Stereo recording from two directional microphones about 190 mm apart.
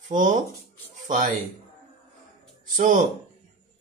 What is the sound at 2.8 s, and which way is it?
Speech, 45° right (ahead or behind).